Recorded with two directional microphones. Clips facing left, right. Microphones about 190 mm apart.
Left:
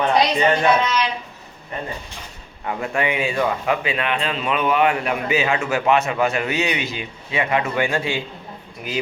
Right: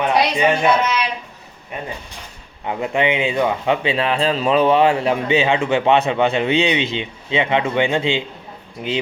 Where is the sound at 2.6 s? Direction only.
20° right (ahead or behind).